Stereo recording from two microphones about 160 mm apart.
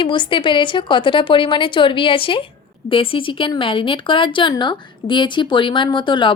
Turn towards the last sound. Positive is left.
turn(degrees=30)  # may be behind; listen again after turning